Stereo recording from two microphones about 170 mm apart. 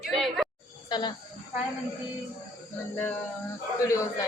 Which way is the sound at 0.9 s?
25° left (ahead or behind).